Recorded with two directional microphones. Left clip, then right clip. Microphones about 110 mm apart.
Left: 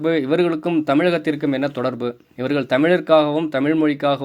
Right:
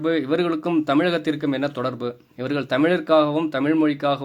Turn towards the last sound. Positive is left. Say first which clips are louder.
# left 2 dB
turn(degrees=25)  # may be behind; listen again after turning